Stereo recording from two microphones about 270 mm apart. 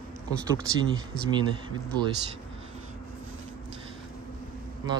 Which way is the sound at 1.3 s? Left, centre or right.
Centre.